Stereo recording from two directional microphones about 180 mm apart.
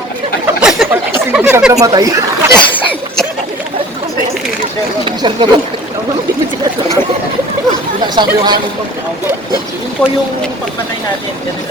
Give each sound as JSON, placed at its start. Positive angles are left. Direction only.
{"t": 0.6, "sound": "a sound", "side_deg": 0}
{"t": 1.3, "sound": "speech", "side_deg": -10}
{"t": 5.0, "sound": "speech", "side_deg": -30}
{"t": 8.0, "sound": "speech", "side_deg": -25}
{"t": 10.0, "sound": "speech", "side_deg": 10}